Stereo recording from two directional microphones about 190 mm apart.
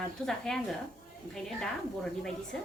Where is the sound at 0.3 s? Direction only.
Centre (ahead or behind).